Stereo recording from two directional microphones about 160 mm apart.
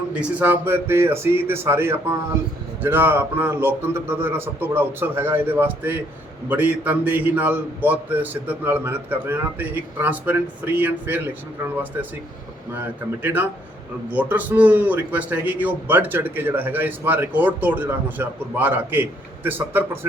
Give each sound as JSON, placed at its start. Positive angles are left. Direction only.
{"t": 0.1, "sound": "a man's voice", "side_deg": -10}
{"t": 13.2, "sound": "a man's voice", "side_deg": -10}